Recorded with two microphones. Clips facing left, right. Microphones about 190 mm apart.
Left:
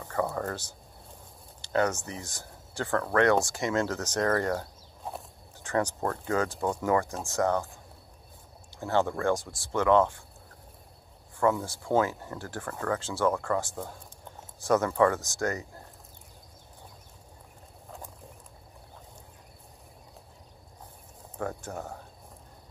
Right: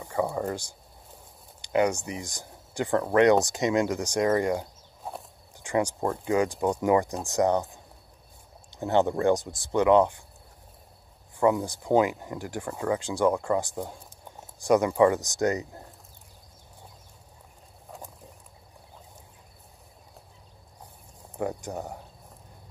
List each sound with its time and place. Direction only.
0.0 s speech: 15° right (ahead or behind)
11.3 s speech: 15° right (ahead or behind)
21.4 s speech: 15° right (ahead or behind)